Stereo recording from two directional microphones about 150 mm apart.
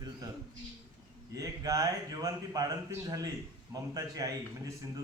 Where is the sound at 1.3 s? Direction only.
20° right (ahead or behind).